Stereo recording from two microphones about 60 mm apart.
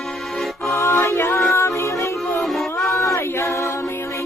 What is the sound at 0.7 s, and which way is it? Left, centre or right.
Music, left.